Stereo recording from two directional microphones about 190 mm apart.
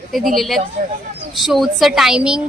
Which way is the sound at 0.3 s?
Centre (ahead or behind).